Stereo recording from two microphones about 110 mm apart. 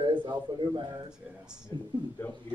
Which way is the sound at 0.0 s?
45° right (ahead or behind).